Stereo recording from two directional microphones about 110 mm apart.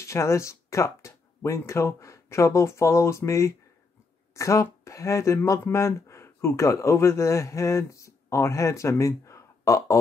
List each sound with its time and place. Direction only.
0.0 s speech: 25° left (ahead or behind)